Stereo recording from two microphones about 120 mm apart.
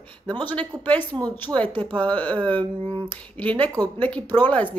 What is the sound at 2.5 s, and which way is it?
Speech, 45° right (ahead or behind).